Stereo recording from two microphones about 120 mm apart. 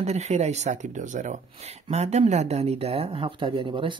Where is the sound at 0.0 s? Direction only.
65° right (ahead or behind).